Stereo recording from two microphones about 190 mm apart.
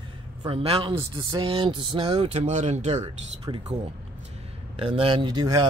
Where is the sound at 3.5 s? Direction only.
25° right (ahead or behind).